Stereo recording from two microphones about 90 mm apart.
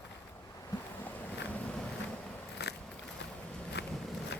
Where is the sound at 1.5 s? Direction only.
10° left (ahead or behind).